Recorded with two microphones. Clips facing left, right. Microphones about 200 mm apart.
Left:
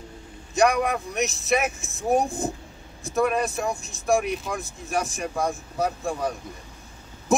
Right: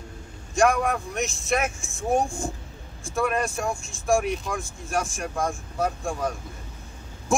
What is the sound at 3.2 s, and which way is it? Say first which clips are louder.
Speech: left 2 dB; centre (ahead or behind).